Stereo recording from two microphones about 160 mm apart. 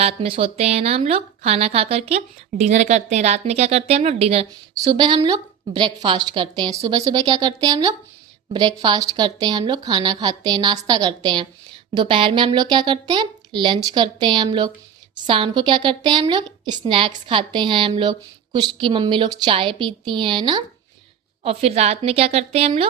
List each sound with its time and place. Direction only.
0.0 s speech: 35° right (ahead or behind)
4.7 s speech: 25° right (ahead or behind)